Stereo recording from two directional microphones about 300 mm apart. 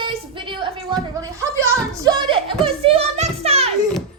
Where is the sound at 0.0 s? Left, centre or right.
Centre.